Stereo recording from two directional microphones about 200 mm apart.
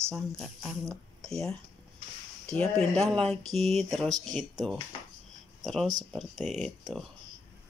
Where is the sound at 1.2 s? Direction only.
Centre (ahead or behind).